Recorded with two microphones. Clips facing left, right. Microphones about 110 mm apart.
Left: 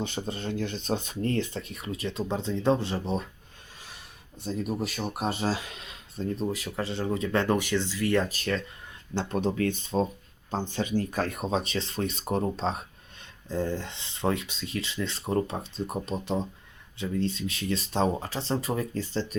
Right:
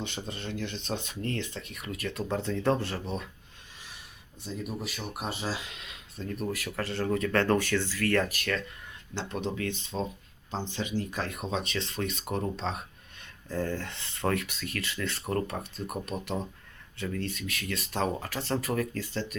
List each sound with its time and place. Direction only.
0.0 s speech: 35° left (ahead or behind); by 3.0 s 20° left (ahead or behind)
4.4 s speech: 40° left (ahead or behind)
13.5 s speech: 20° left (ahead or behind)